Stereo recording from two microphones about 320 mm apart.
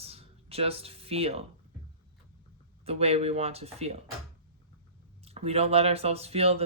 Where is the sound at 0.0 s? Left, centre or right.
Centre.